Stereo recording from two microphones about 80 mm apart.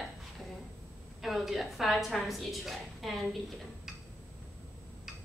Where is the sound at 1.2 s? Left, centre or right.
Centre.